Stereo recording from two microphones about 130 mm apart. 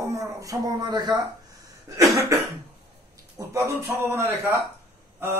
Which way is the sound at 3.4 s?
25° right (ahead or behind).